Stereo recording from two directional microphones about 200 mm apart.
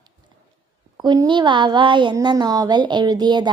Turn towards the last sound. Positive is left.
turn(degrees=-20)  # may be behind; listen again after turning